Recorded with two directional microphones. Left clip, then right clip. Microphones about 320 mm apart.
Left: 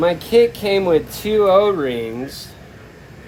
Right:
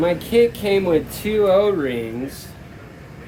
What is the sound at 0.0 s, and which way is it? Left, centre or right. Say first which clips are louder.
Speech: left 2 dB; left.